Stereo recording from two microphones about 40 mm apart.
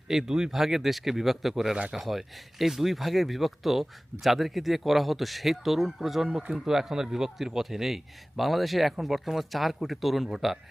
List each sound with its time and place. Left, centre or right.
0.1 s speech: centre